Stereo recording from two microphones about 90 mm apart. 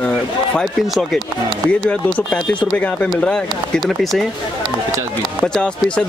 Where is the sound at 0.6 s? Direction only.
5° left (ahead or behind).